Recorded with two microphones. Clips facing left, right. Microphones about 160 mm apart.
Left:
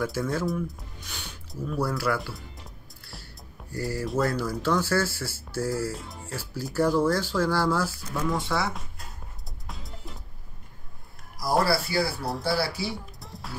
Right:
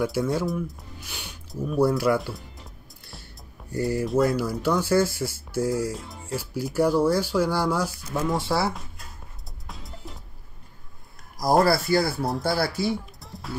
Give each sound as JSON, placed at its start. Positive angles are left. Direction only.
{"t": 0.0, "sound": "speech", "side_deg": -15}
{"t": 3.7, "sound": "speech", "side_deg": -20}
{"t": 11.3, "sound": "speech", "side_deg": -45}
{"t": 12.8, "sound": "music", "side_deg": 0}